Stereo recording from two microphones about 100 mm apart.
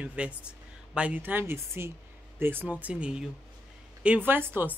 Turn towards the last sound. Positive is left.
turn(degrees=-20)  # may be behind; listen again after turning